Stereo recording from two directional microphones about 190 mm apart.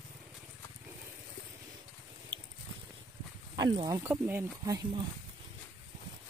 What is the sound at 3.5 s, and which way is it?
Speech, 20° right (ahead or behind).